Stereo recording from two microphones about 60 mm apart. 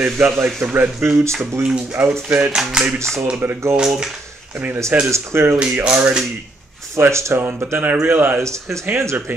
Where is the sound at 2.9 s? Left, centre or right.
Right.